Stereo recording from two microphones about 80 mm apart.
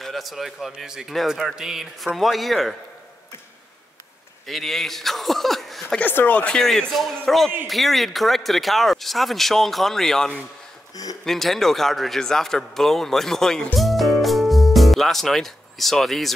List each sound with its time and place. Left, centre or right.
0.0 s speech: centre
4.5 s speech: centre
5.9 s speech: left
6.6 s speech: centre
13.7 s music: centre